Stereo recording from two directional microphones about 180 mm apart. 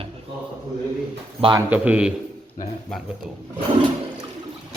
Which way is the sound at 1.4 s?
25° right (ahead or behind).